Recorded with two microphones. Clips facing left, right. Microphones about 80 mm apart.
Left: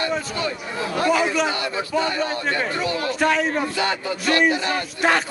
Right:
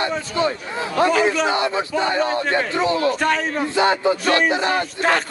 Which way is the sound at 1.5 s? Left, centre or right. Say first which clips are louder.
Right 3 dB; right.